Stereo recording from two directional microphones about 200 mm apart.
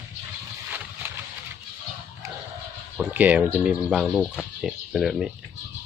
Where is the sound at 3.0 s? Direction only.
5° right (ahead or behind).